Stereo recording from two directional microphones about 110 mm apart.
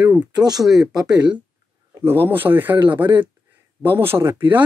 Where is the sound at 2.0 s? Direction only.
20° right (ahead or behind).